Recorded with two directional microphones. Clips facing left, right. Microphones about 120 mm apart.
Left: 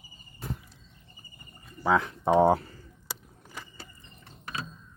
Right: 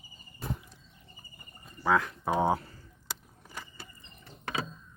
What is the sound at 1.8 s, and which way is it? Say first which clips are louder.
Speech: left 2 dB; 20° left (ahead or behind).